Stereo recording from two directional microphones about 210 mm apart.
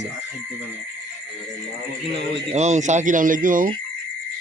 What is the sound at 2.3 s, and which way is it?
Speech, 35° right (ahead or behind).